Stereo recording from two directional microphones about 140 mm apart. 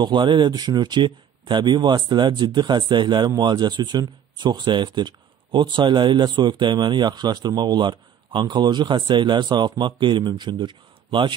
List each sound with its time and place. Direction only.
0.0 s speech: 35° right (ahead or behind)